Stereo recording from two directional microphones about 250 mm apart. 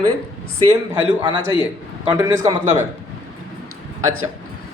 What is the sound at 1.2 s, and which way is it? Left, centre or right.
A man's voice, centre.